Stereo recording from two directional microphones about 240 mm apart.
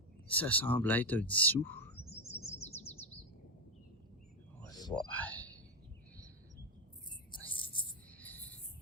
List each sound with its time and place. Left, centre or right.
0.3 s speech: centre
2.4 s bird: left
4.7 s a sound: centre
5.1 s speech: centre
7.4 s a sound: left
8.2 s cricket: centre